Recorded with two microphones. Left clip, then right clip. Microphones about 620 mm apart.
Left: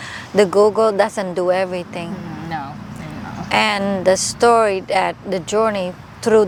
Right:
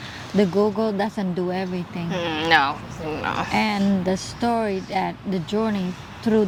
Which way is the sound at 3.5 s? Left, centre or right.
Left.